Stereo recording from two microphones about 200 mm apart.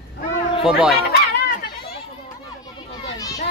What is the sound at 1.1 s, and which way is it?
Chatter, 50° left (ahead or behind).